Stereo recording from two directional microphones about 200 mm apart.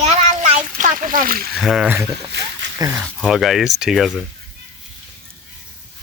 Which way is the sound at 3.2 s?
Centre (ahead or behind).